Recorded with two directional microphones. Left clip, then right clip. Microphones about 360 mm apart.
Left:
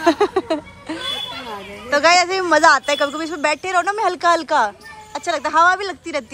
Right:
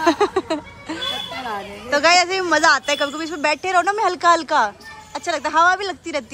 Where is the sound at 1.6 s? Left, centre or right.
Centre.